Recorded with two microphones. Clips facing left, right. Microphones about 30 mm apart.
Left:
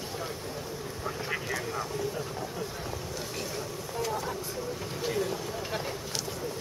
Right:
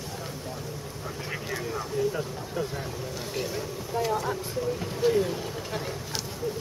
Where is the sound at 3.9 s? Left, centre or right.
Centre.